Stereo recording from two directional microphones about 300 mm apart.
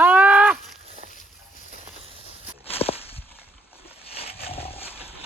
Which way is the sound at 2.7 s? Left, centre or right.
Centre.